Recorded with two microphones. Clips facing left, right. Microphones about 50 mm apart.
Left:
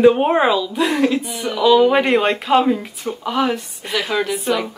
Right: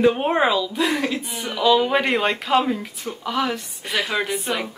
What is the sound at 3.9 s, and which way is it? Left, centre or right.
Speech, centre.